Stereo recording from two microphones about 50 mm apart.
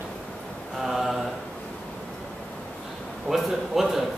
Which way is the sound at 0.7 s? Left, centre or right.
Centre.